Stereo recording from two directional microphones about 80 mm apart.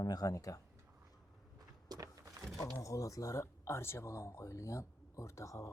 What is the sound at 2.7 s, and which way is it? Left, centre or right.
Speech, left.